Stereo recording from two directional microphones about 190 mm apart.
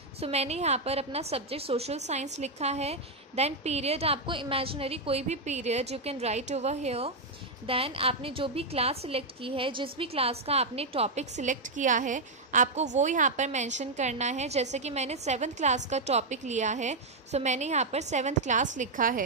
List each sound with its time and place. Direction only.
0.2 s a woman's voice: 35° right (ahead or behind)